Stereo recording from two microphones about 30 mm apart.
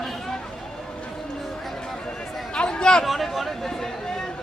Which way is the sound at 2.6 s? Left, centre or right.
Left.